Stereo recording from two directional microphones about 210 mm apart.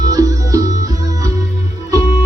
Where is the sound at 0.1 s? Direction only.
15° right (ahead or behind).